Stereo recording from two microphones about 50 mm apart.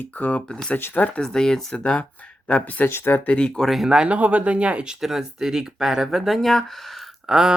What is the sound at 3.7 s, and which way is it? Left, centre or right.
Speech, centre.